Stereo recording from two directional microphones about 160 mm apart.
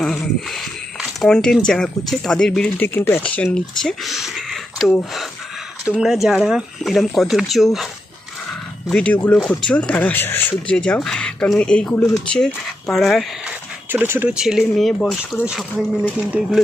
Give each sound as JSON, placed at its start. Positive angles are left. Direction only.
{"t": 0.0, "sound": "speech", "side_deg": 5}
{"t": 8.9, "sound": "speech", "side_deg": 10}
{"t": 13.9, "sound": "speech", "side_deg": -15}